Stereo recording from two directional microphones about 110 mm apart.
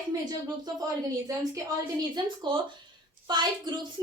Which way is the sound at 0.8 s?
30° right (ahead or behind).